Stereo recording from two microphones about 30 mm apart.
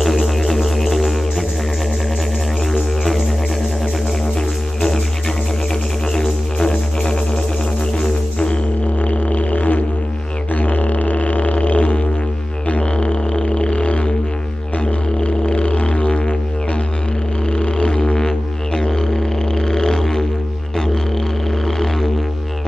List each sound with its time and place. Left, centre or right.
0.0 s music: centre
4.7 s music: centre
6.1 s music: left
9.0 s music: left
10.5 s didgeridoo: left
12.9 s music: left
15.1 s music: left
17.5 s music: left